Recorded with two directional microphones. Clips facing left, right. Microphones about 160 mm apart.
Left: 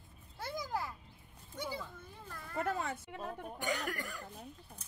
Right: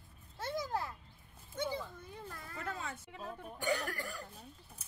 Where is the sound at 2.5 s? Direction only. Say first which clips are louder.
Left 7 dB; 60° left (ahead or behind).